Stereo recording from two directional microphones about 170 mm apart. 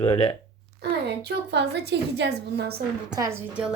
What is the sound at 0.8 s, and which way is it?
A woman's voice, 80° right.